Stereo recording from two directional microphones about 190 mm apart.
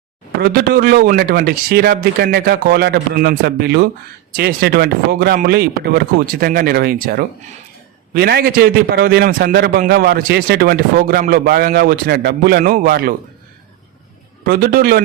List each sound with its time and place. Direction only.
0.4 s a man's voice: 55° right (ahead or behind)
14.4 s a man's voice: 55° right (ahead or behind)